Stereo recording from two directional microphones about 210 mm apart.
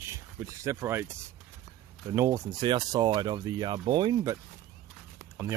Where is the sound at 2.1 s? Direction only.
15° right (ahead or behind).